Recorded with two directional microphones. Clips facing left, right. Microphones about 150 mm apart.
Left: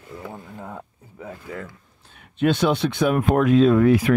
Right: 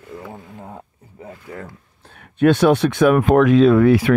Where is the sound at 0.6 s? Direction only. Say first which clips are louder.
Left 1 dB; 30° right (ahead or behind).